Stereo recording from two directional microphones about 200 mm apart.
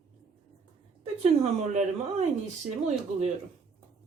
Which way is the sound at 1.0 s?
30° right (ahead or behind).